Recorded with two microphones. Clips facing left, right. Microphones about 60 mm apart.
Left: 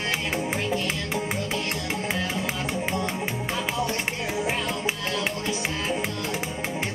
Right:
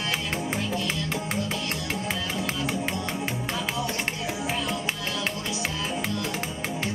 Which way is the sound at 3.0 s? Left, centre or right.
Centre.